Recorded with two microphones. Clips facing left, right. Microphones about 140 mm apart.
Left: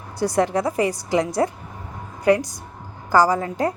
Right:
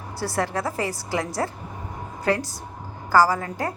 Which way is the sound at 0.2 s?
20° left (ahead or behind).